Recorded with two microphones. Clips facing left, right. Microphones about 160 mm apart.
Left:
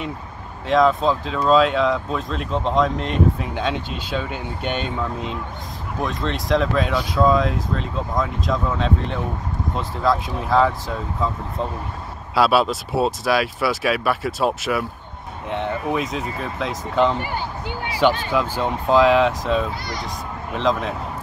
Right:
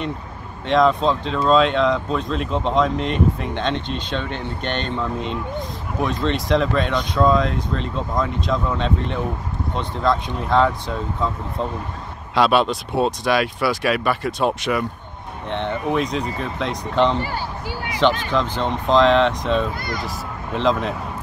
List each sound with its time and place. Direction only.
0.7 s speech: centre (ahead or behind)
17.2 s a sound: 20° left (ahead or behind)
18.3 s speech: 10° left (ahead or behind)